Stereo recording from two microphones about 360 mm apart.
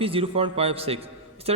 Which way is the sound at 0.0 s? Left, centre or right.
Centre.